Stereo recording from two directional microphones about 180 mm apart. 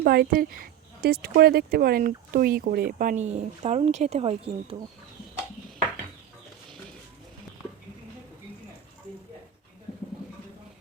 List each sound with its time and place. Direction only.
0.0 s speech: 55° right (ahead or behind)
3.0 s speech: 45° right (ahead or behind)